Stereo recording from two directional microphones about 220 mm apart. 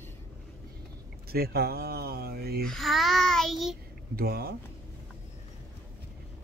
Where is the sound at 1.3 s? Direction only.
45° right (ahead or behind).